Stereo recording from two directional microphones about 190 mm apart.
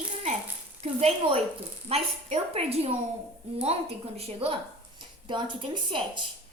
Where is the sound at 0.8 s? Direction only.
35° right (ahead or behind).